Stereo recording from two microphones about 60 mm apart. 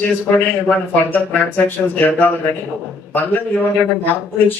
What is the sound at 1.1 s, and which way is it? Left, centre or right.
Speech, left.